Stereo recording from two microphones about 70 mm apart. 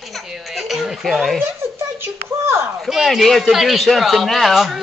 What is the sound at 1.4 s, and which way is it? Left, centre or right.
Speech, right.